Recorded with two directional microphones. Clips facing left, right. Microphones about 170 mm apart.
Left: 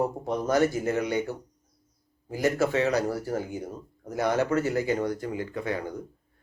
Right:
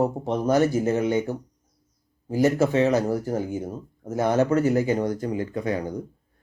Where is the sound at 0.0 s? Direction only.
15° right (ahead or behind).